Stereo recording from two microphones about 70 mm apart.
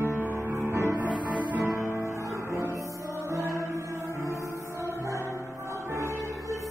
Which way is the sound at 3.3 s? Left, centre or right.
Right.